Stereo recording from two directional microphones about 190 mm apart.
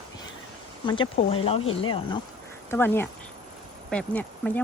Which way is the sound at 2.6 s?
10° left (ahead or behind).